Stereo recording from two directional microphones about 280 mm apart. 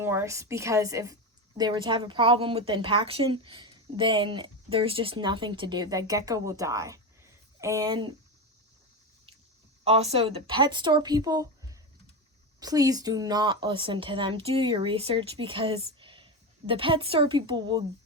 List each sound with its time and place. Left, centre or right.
0.0 s a woman's voice: centre
9.8 s a woman's voice: right